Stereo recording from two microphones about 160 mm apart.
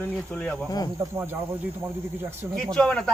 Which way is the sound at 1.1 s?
15° right (ahead or behind).